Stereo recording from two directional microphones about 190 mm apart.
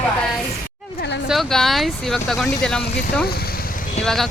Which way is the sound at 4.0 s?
Centre (ahead or behind).